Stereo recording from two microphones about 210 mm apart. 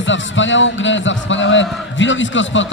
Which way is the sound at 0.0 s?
65° left (ahead or behind).